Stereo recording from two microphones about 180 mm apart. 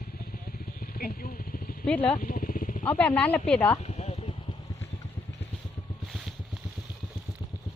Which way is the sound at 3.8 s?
40° left (ahead or behind).